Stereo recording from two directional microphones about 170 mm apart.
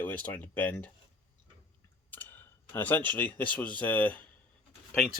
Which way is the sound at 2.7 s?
10° left (ahead or behind).